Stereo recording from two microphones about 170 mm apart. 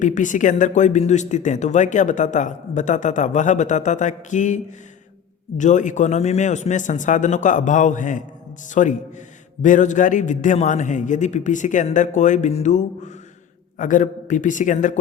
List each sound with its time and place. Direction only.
0.0 s speech: 50° left (ahead or behind)